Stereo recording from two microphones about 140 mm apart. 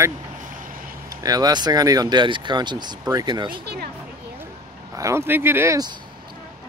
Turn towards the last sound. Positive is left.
turn(degrees=-25)  # may be behind; listen again after turning